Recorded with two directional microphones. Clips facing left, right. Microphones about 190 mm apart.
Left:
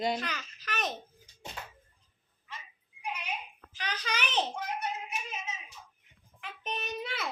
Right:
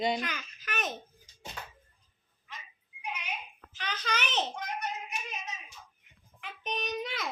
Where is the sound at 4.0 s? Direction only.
10° left (ahead or behind).